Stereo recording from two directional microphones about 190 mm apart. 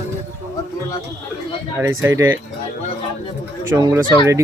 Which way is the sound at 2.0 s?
15° right (ahead or behind).